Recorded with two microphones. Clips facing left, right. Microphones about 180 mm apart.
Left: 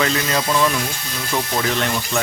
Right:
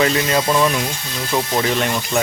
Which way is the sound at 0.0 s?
20° right (ahead or behind).